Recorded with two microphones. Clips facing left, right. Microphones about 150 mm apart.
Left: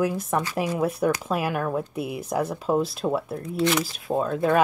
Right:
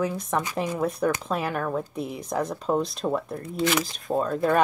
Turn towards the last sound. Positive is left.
turn(degrees=5)  # may be behind; listen again after turning